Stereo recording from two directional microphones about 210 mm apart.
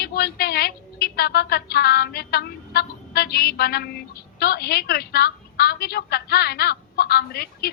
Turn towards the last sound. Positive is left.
turn(degrees=50)  # may be behind; listen again after turning